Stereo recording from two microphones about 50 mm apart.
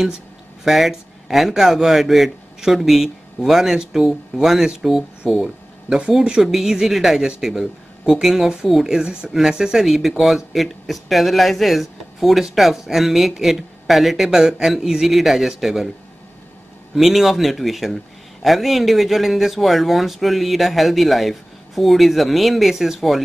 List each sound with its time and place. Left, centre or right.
0.7 s speech: centre
16.9 s speech: centre